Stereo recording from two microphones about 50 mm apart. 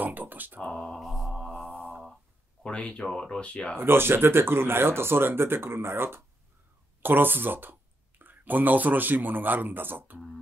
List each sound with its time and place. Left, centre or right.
0.0 s speech: right
0.6 s a sound: centre
0.9 s mantra: centre
1.3 s mantra: centre
2.6 s speech: left
3.7 s speech: right